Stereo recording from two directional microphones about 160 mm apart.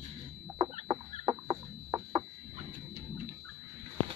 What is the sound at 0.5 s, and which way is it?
Chicken, 30° right (ahead or behind).